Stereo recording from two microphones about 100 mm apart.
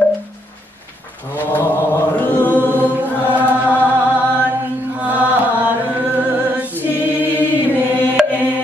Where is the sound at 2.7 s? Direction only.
20° right (ahead or behind).